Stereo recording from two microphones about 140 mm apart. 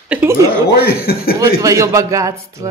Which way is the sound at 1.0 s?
90° left.